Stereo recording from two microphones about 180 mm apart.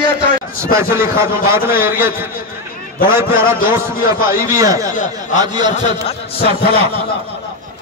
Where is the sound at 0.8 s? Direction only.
55° left (ahead or behind).